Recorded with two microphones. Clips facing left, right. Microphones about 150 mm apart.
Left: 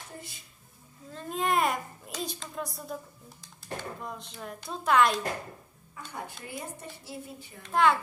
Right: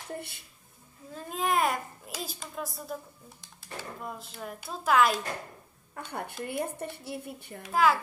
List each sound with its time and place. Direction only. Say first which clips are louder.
1.1 s a child's voice: even; centre (ahead or behind)
5.9 s a woman's voice: right 4 dB; 60° right (ahead or behind)
7.6 s a child's voice: even; 5° right (ahead or behind)